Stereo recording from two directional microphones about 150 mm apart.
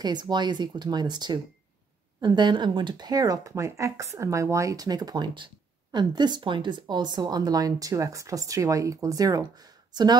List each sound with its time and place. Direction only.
0.0 s speech: 30° right (ahead or behind)